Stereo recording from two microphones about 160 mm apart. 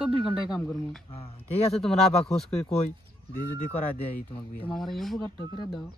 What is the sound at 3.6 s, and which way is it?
Speech, 10° left (ahead or behind).